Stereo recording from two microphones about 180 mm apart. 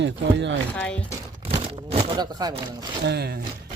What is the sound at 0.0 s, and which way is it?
Speech, 85° right.